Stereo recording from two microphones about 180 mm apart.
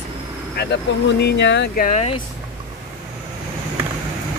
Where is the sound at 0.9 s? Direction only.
85° left.